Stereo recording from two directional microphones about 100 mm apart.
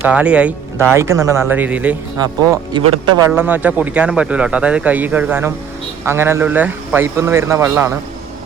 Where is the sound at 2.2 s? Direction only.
40° right (ahead or behind).